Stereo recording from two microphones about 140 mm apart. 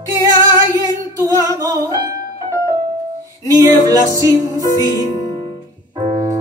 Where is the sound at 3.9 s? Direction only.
25° right (ahead or behind).